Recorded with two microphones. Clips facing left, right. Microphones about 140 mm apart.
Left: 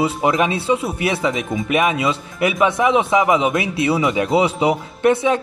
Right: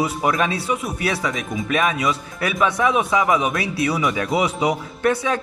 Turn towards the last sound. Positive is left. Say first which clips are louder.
# left 4 dB
turn(degrees=20)  # may be behind; listen again after turning